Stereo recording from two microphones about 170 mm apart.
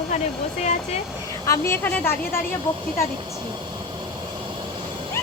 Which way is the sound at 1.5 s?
15° left (ahead or behind).